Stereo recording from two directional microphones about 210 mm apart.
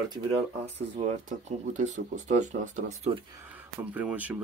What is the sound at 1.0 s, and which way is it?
Speech, 25° right (ahead or behind).